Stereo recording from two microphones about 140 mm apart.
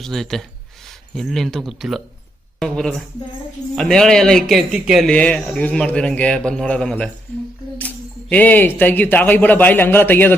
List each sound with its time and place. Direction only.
0.0 s speech: centre (ahead or behind)
5.0 s a man's voice: 5° left (ahead or behind)